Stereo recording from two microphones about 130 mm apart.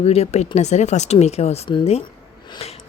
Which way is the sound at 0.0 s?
50° left (ahead or behind).